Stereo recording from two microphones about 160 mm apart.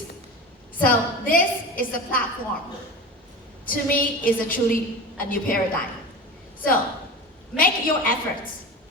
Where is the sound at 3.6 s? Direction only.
60° left (ahead or behind).